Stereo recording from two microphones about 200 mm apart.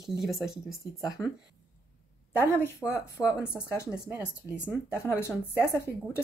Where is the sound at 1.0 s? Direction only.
20° left (ahead or behind).